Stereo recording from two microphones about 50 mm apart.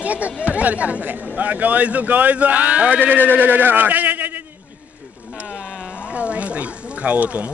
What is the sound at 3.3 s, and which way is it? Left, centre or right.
Speech, right.